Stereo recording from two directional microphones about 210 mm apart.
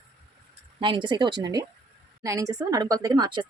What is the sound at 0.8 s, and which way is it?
Speech, 20° right (ahead or behind).